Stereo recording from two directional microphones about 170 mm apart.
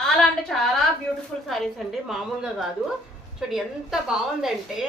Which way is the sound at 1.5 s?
Centre (ahead or behind).